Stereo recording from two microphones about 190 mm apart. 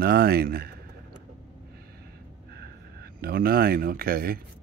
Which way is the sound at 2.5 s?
55° right (ahead or behind).